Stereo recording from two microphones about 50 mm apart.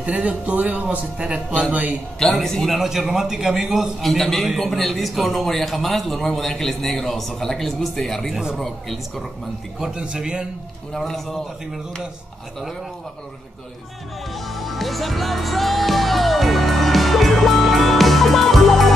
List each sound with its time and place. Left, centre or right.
0.0 s speech: right
2.4 s speech: centre
2.7 s a man's voice: centre
4.0 s a man's voice: centre
9.8 s a man's voice: centre
10.9 s a man's voice: centre
14.3 s music: centre